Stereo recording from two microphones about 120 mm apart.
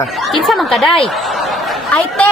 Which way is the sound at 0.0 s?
Centre (ahead or behind).